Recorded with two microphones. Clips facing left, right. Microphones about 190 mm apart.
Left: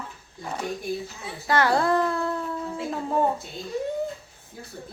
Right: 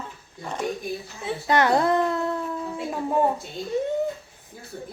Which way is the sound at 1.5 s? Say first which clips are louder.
Right 1 dB; 20° right (ahead or behind).